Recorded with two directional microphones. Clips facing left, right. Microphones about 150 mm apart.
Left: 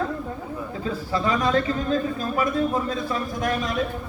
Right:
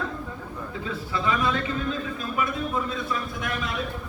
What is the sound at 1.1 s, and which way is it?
A man's voice, 40° left (ahead or behind).